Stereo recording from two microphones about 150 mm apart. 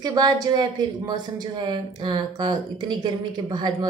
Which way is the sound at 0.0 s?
25° right (ahead or behind).